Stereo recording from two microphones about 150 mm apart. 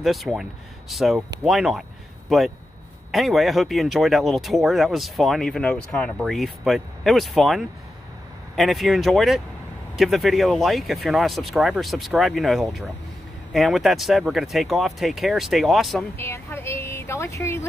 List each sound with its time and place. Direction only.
0.0 s speech: centre (ahead or behind)
16.2 s a woman's voice: 15° left (ahead or behind)